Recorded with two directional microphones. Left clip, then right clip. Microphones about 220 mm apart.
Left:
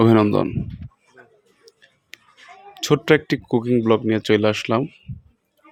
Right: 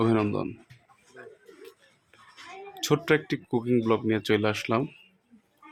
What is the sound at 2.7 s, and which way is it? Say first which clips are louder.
Speech: left 7 dB; 25° left (ahead or behind).